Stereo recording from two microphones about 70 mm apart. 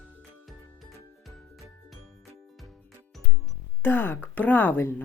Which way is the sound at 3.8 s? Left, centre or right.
Left.